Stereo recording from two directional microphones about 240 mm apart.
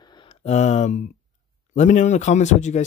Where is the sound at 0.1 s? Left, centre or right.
Left.